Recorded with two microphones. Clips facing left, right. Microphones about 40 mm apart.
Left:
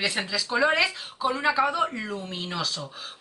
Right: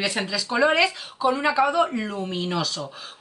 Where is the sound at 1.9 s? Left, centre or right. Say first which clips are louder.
Right 4 dB; centre.